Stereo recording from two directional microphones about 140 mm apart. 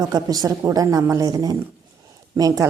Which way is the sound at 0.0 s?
30° right (ahead or behind).